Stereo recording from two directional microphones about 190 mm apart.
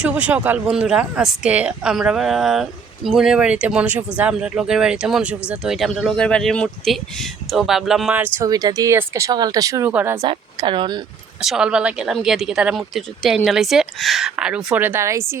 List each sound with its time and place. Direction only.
0.0 s speech: 5° right (ahead or behind)
8.4 s speech: 20° right (ahead or behind)
10.2 s speech: 25° right (ahead or behind)
11.3 s speech: 5° right (ahead or behind)